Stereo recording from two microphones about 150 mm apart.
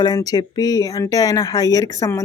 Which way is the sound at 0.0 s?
25° left (ahead or behind).